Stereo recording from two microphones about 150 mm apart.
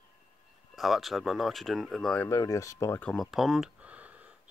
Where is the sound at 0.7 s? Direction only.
Centre (ahead or behind).